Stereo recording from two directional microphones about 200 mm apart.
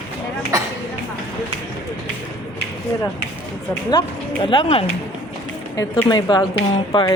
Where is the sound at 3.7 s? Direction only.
20° left (ahead or behind).